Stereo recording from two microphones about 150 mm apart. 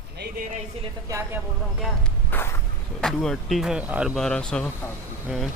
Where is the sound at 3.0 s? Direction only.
5° left (ahead or behind).